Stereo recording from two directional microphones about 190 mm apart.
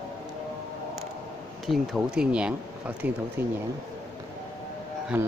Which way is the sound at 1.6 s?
Centre (ahead or behind).